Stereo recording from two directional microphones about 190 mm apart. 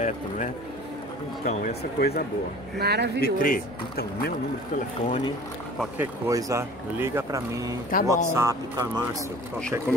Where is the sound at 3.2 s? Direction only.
50° left (ahead or behind).